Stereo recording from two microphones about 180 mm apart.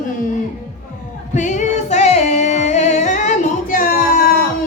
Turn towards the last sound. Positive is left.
turn(degrees=50)  # may be behind; listen again after turning